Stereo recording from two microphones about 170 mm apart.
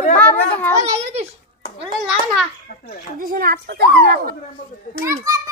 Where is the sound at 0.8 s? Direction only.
40° right (ahead or behind).